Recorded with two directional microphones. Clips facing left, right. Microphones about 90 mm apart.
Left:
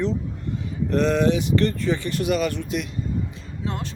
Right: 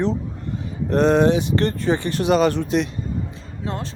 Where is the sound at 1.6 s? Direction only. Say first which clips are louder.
Right 2 dB; 45° right (ahead or behind).